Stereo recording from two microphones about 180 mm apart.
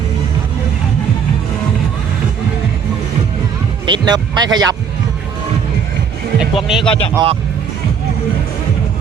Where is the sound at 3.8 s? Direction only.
25° right (ahead or behind).